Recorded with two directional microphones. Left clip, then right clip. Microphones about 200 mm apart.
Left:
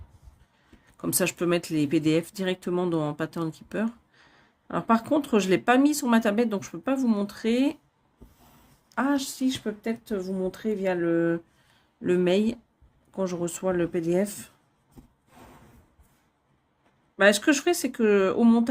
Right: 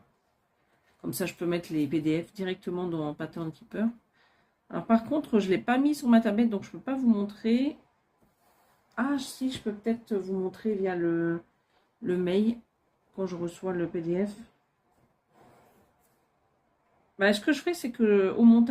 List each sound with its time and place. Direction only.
1.2 s speech: 60° left (ahead or behind)
8.9 s speech: 65° left (ahead or behind)
17.2 s speech: 60° left (ahead or behind)